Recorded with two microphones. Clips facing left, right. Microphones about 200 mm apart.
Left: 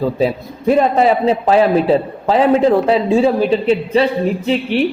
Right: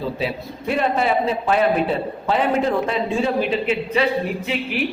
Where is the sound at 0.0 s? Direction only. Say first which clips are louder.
Left 8 dB; 45° left (ahead or behind).